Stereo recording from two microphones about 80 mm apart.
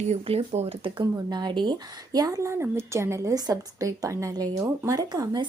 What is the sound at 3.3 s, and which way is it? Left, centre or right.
A woman's voice, right.